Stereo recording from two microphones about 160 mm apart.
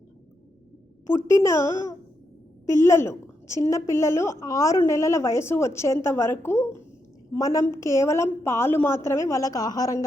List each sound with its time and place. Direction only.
1.1 s a woman's voice: 20° left (ahead or behind)